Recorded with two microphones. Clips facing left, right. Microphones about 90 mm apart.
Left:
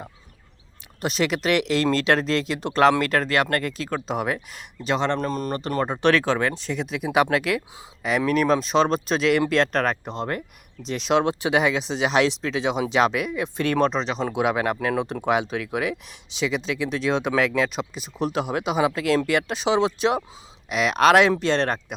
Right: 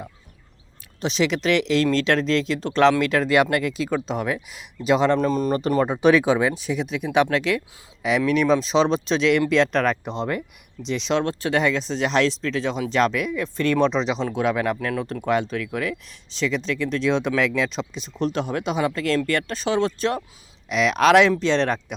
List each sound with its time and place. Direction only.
1.0 s speech: 5° left (ahead or behind)
3.2 s speech: 15° right (ahead or behind)
3.6 s speech: 5° right (ahead or behind)
9.7 s speech: 40° left (ahead or behind)
11.1 s speech: 15° left (ahead or behind)
13.6 s speech: 65° left (ahead or behind)
14.3 s speech: 15° left (ahead or behind)
21.4 s speech: 45° left (ahead or behind)